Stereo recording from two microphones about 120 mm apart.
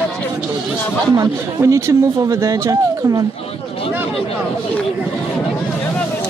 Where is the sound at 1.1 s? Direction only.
30° right (ahead or behind).